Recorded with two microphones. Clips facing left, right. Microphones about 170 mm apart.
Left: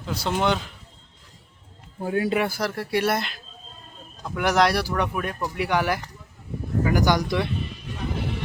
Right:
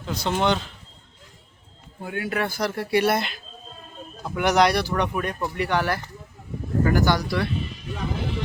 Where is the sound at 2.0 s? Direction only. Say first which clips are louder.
Left 6 dB; 35° left (ahead or behind).